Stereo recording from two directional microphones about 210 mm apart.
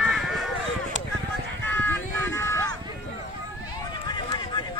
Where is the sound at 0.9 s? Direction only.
35° right (ahead or behind).